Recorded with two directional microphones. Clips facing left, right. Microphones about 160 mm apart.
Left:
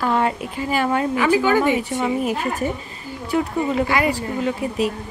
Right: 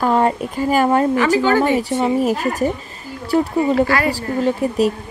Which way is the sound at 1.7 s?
35° right (ahead or behind).